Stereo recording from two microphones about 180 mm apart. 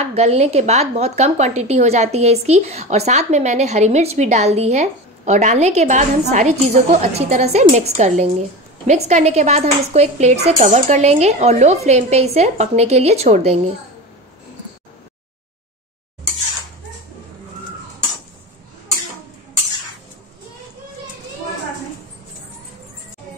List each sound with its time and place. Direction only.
0.0 s a woman's voice: 35° right (ahead or behind)